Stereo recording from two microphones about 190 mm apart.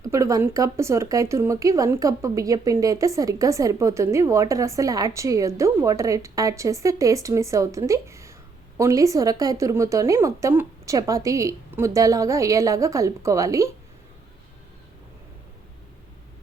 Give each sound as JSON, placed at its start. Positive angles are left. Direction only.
{"t": 0.0, "sound": "speech", "side_deg": -15}